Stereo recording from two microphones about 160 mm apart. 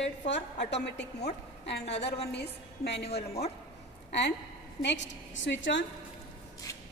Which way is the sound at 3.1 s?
40° left (ahead or behind).